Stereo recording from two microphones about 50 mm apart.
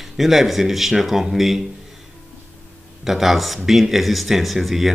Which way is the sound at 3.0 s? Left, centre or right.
Centre.